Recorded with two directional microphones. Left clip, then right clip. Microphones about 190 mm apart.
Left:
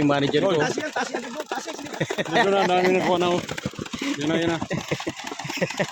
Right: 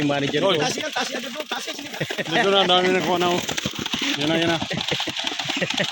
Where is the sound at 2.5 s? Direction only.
5° right (ahead or behind).